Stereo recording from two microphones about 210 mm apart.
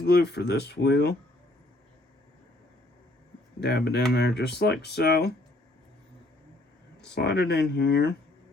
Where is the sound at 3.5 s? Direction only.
55° left (ahead or behind).